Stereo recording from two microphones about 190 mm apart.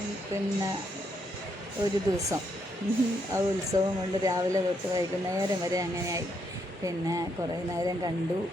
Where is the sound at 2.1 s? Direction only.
20° right (ahead or behind).